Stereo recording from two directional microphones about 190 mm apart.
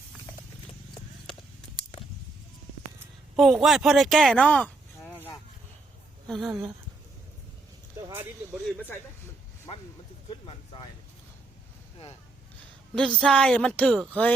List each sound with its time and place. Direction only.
3.3 s a woman's voice: centre (ahead or behind)
8.0 s speech: 15° right (ahead or behind)
8.6 s speech: 10° left (ahead or behind)
10.2 s speech: 25° left (ahead or behind)
12.9 s a woman's voice: 5° left (ahead or behind)